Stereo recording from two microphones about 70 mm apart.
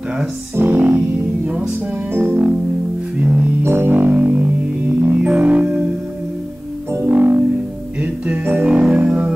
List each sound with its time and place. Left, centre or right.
0.6 s music: right
2.1 s music: right
3.6 s music: right; by 5.9 s centre
7.0 s music: right